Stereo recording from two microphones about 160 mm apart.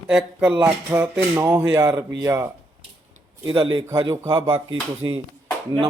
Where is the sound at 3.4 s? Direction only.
30° right (ahead or behind).